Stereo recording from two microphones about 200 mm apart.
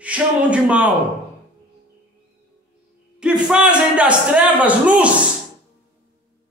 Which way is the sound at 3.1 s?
5° right (ahead or behind).